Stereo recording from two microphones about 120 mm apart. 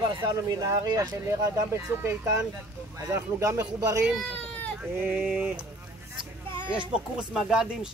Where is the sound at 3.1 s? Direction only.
25° right (ahead or behind).